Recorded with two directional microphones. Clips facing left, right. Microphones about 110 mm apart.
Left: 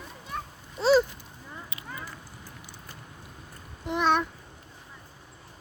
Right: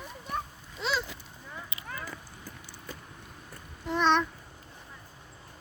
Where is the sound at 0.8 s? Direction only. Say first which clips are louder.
Left 11 dB; 40° left (ahead or behind).